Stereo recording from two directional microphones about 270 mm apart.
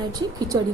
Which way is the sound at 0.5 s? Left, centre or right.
Centre.